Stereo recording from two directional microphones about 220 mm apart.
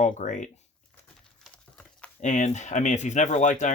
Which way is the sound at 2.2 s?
35° left (ahead or behind).